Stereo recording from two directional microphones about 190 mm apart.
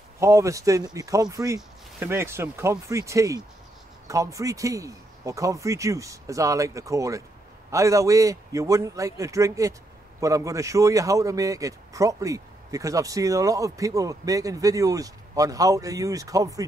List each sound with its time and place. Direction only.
0.2 s speech: 15° right (ahead or behind)